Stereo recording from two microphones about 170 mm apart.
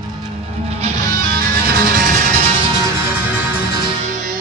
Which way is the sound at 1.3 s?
60° right (ahead or behind).